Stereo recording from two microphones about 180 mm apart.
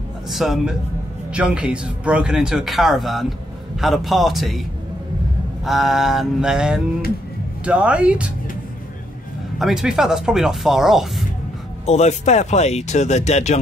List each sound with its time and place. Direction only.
0.3 s a man's voice: centre (ahead or behind)
5.7 s a man's voice: centre (ahead or behind)
9.6 s a man's voice: centre (ahead or behind)
11.8 s speech: 35° left (ahead or behind)